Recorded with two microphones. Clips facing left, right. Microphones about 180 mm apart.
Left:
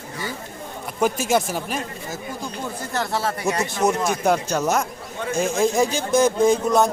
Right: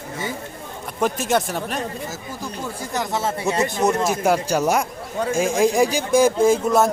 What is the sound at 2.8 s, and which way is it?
Speech, 20° right (ahead or behind).